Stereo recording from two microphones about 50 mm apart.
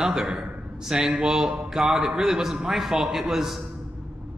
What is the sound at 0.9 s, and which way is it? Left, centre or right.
A man's voice, centre.